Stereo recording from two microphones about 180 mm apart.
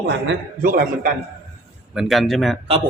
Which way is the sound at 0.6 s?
50° right (ahead or behind).